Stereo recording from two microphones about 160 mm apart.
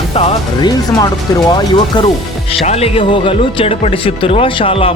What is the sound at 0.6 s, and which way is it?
Speech, 25° left (ahead or behind).